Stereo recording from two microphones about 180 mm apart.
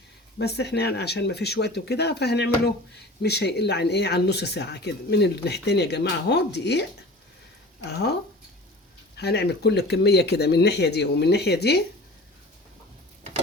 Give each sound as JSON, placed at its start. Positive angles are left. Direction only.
{"t": 0.3, "sound": "speech", "side_deg": 65}
{"t": 7.9, "sound": "speech", "side_deg": 65}
{"t": 9.1, "sound": "speech", "side_deg": 65}